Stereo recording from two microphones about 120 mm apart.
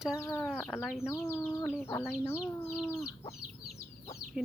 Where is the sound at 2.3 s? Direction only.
20° left (ahead or behind).